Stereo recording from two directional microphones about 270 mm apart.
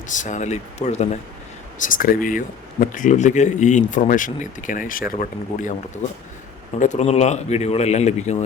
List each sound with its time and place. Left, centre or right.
0.1 s speech: left
6.7 s speech: left